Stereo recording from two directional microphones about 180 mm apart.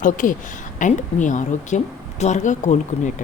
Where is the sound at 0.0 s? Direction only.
45° left (ahead or behind).